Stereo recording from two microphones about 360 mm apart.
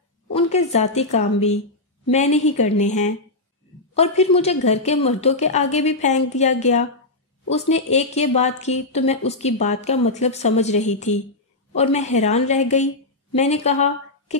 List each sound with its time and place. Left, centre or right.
0.3 s a woman's voice: centre